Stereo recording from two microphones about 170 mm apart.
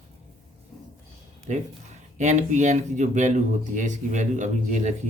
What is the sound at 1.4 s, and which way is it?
Speech, 45° right (ahead or behind).